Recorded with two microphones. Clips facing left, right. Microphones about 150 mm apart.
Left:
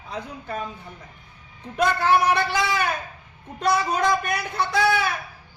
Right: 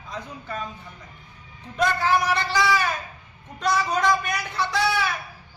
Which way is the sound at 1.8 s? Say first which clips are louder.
Left 2 dB; 60° left (ahead or behind).